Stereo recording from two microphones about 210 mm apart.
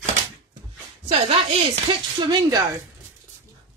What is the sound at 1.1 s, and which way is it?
Speech, 25° right (ahead or behind).